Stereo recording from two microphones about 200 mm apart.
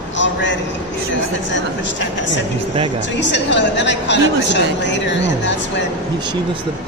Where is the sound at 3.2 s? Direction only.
60° left (ahead or behind).